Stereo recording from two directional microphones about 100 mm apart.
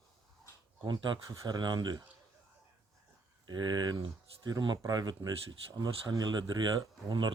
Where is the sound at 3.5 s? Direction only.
45° right (ahead or behind).